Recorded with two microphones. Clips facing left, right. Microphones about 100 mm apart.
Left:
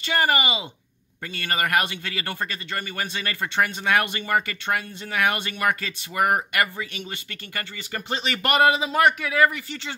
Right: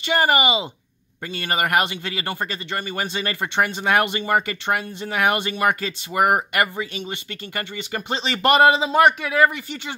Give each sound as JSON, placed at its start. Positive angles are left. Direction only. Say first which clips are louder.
{"t": 0.0, "sound": "a man's voice", "louder": "right 4 dB", "side_deg": -20}